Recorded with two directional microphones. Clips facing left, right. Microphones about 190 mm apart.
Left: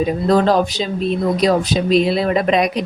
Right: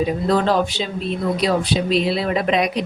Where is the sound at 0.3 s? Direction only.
40° left (ahead or behind).